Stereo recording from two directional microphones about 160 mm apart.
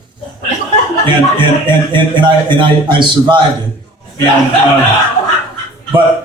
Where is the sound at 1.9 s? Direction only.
30° right (ahead or behind).